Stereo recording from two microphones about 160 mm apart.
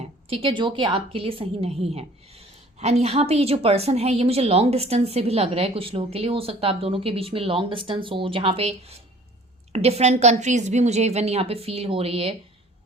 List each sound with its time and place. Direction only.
0.0 s a woman's voice: 35° right (ahead or behind)